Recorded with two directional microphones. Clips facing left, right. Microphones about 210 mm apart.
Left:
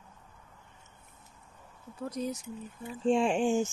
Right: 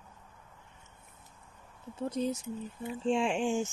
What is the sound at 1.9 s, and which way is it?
Speech, 25° right (ahead or behind).